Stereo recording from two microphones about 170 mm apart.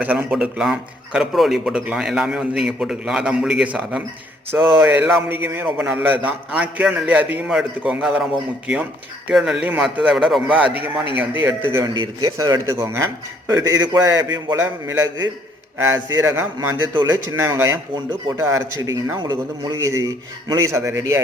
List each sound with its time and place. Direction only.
0.0 s a man's voice: 10° right (ahead or behind)